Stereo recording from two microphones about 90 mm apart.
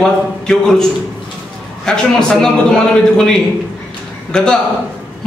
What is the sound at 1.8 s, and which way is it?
A man's voice, 5° left (ahead or behind).